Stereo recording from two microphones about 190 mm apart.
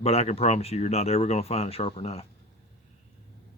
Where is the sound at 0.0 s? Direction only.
35° left (ahead or behind).